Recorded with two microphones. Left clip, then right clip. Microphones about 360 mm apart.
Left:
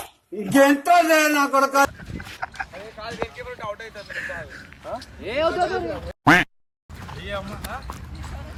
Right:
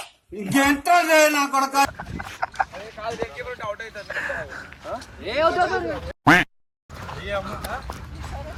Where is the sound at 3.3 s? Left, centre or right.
Left.